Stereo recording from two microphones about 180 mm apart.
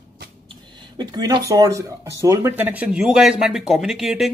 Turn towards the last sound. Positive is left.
turn(degrees=0)  # may be behind; listen again after turning